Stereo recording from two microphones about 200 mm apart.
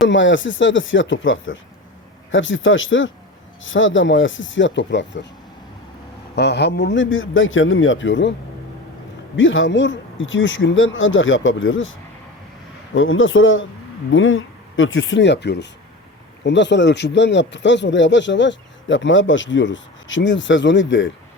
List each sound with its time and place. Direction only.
0.1 s speech: 70° left (ahead or behind)
6.3 s speech: 55° left (ahead or behind)
9.3 s speech: 70° left (ahead or behind)